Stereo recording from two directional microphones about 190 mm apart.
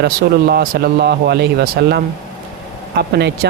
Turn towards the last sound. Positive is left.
turn(degrees=-60)  # may be behind; listen again after turning